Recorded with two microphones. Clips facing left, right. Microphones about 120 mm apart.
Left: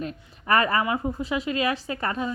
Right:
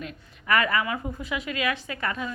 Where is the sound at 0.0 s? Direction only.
35° left (ahead or behind).